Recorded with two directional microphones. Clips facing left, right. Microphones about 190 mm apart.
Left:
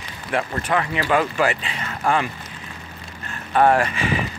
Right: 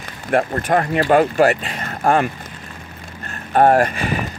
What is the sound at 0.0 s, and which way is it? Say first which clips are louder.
Speech: right 6 dB; 50° right (ahead or behind).